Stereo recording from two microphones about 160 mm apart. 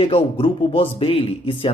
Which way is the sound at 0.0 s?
35° left (ahead or behind).